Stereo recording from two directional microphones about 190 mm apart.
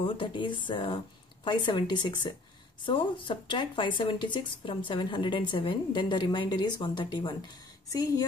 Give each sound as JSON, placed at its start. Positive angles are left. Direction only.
{"t": 0.0, "sound": "speech", "side_deg": 25}